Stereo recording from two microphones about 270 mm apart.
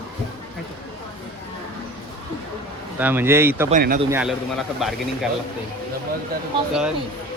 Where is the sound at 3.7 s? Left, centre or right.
Right.